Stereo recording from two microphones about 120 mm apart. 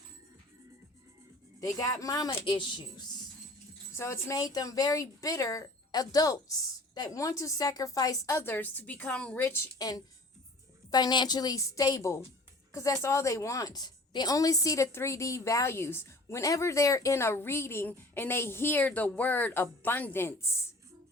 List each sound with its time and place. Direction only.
1.6 s a woman's voice: 30° left (ahead or behind)
2.3 s a woman's voice: 45° left (ahead or behind)
3.9 s a woman's voice: 20° left (ahead or behind)
9.7 s a woman's voice: 30° left (ahead or behind)